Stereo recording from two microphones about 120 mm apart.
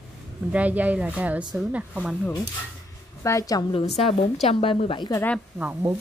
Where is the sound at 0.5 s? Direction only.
10° right (ahead or behind).